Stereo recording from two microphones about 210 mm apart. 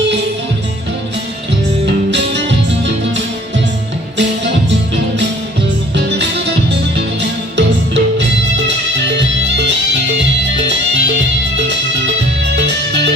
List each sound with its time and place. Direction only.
1.9 s music: 55° right (ahead or behind)
6.0 s music: 55° right (ahead or behind)